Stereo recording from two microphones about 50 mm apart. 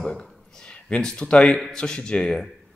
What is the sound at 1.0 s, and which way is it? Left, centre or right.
Speech, centre.